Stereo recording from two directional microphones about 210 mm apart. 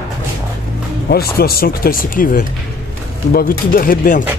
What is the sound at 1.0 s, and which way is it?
Speech, 45° left (ahead or behind).